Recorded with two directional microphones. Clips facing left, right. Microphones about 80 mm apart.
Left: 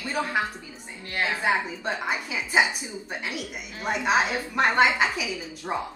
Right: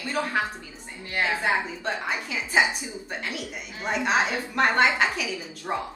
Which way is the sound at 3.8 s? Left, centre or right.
Centre.